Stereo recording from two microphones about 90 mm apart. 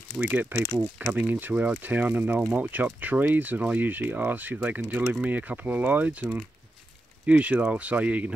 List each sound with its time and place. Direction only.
0.2 s speech: 20° right (ahead or behind)
7.2 s speech: 15° right (ahead or behind)